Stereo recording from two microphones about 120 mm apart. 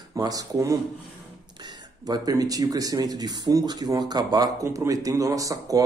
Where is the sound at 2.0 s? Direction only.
30° right (ahead or behind).